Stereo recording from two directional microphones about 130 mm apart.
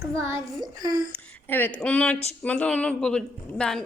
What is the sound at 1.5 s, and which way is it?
A woman's voice, 15° left (ahead or behind).